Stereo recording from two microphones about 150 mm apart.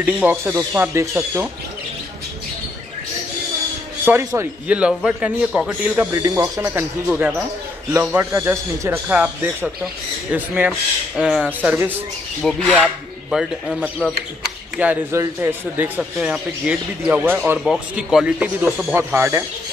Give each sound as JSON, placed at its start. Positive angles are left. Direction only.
{"t": 0.0, "sound": "speech", "side_deg": -10}
{"t": 4.0, "sound": "speech", "side_deg": -15}
{"t": 6.1, "sound": "speech", "side_deg": -20}
{"t": 12.4, "sound": "speech", "side_deg": 5}
{"t": 14.8, "sound": "speech", "side_deg": -15}